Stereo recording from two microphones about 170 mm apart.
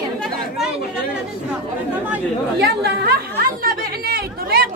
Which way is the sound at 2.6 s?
70° right (ahead or behind).